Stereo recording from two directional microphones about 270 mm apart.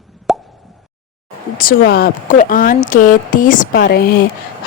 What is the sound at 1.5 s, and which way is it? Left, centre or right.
Speech, left.